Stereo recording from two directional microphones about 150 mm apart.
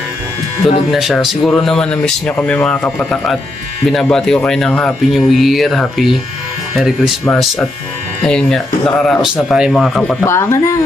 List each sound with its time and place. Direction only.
0.6 s speech: centre (ahead or behind)
8.2 s speech: 5° left (ahead or behind)
10.2 s speech: 20° left (ahead or behind)